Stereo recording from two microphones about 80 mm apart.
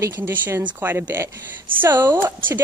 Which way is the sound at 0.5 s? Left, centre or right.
Right.